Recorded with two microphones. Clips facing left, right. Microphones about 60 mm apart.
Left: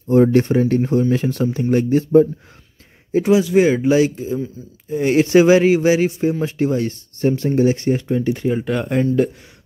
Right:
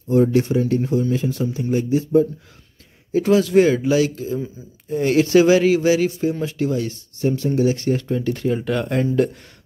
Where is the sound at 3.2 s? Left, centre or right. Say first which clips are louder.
Left 1 dB; centre.